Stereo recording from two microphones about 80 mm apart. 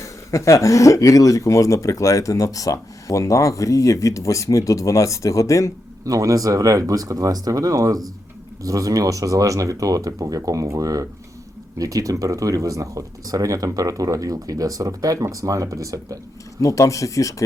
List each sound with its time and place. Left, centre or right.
0.0 s speech: left
6.1 s speech: right
16.6 s speech: left